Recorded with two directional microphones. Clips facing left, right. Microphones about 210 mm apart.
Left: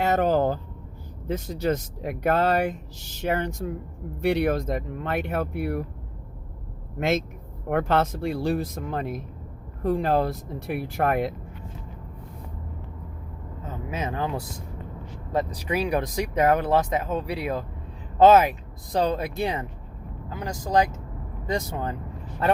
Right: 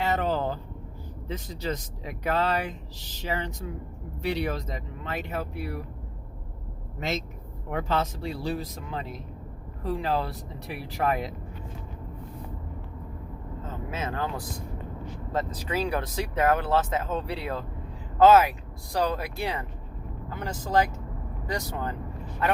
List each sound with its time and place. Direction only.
0.0 s vehicle: 45° left (ahead or behind)
1.3 s speech: 45° left (ahead or behind)
7.7 s speech: 60° left (ahead or behind)
13.7 s vehicle: 15° left (ahead or behind)
15.3 s speech: 15° left (ahead or behind)